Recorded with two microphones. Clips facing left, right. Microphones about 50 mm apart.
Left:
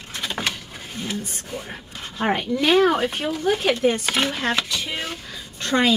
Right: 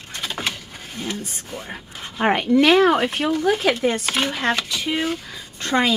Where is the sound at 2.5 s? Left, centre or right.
Centre.